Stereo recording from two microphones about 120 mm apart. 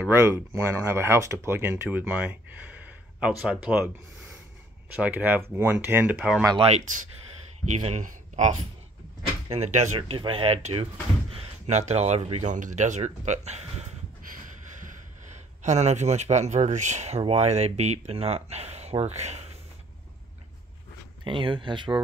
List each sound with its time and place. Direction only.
0.1 s speech: 25° right (ahead or behind)
4.9 s speech: 10° right (ahead or behind)
6.1 s speech: 5° right (ahead or behind)
6.6 s speech: 65° right (ahead or behind)
7.7 s speech: 75° right (ahead or behind); by 8.5 s 90° right
9.5 s speech: 70° right (ahead or behind)
9.9 s speech: 50° right (ahead or behind); by 13.9 s 65° right (ahead or behind)
14.9 s speech: 85° right
17.2 s speech: 60° right (ahead or behind)
21.2 s speech: 45° right (ahead or behind)